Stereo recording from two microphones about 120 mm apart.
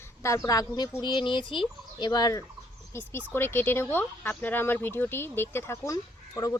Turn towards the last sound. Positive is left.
turn(degrees=25)  # may be behind; listen again after turning